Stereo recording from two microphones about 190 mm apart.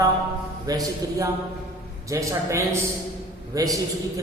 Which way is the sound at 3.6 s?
20° right (ahead or behind).